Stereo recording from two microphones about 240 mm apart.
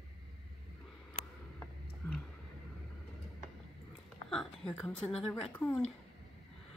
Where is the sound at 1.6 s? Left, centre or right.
Centre.